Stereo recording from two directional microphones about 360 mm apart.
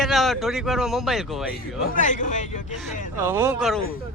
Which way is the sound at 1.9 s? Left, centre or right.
Left.